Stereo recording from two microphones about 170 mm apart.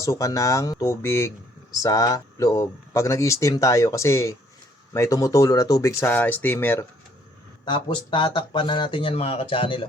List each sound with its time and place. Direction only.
0.0 s speech: 20° left (ahead or behind)
7.6 s speech: 30° left (ahead or behind)